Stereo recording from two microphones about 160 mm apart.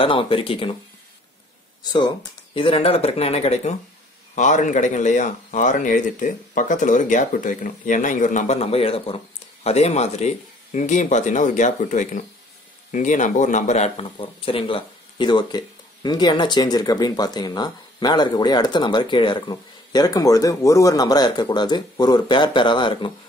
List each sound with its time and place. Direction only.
0.0 s speech: 35° left (ahead or behind)
1.9 s speech: 25° left (ahead or behind)